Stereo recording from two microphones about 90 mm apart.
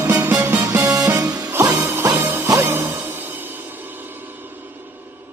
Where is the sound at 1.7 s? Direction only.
25° right (ahead or behind).